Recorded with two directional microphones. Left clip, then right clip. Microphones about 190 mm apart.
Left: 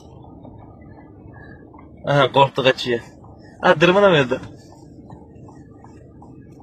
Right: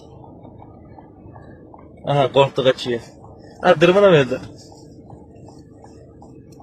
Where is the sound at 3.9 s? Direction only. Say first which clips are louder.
Right 1 dB; 15° left (ahead or behind).